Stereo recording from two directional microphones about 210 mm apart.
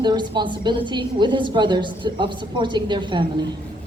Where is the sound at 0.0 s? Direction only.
20° right (ahead or behind).